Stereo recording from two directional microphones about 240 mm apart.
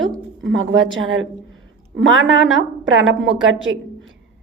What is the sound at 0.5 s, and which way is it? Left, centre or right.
Speech, right.